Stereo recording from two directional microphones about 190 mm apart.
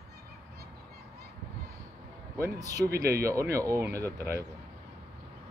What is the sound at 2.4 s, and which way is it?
Speech, 15° right (ahead or behind).